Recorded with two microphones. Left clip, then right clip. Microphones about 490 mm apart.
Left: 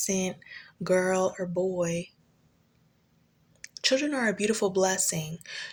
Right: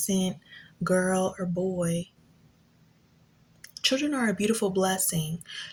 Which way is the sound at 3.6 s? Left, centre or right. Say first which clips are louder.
Left 1 dB; left.